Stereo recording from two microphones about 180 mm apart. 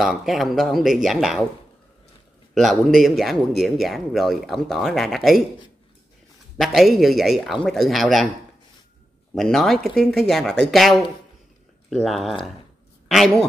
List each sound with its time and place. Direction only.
0.0 s speech: centre (ahead or behind)
2.5 s speech: centre (ahead or behind)
6.6 s speech: centre (ahead or behind)
9.3 s speech: centre (ahead or behind)